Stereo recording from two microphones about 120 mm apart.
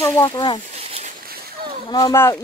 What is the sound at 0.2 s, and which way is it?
Speech, 35° left (ahead or behind).